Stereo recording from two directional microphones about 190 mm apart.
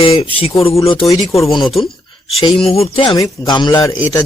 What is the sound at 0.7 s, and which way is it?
Speech, 15° left (ahead or behind).